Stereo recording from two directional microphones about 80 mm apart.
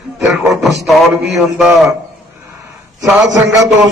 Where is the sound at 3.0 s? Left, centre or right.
Centre.